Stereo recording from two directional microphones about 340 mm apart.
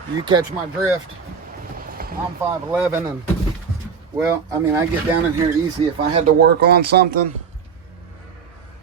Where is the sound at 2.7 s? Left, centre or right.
Centre.